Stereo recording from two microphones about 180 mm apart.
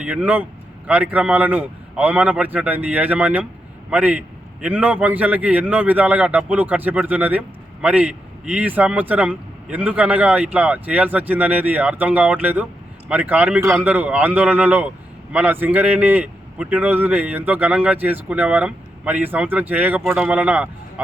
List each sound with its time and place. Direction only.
0.0 s a man's voice: 10° right (ahead or behind)